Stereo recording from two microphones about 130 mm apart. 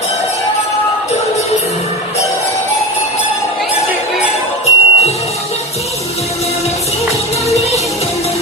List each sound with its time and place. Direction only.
4.6 s music: 55° left (ahead or behind)
7.5 s music: 55° left (ahead or behind)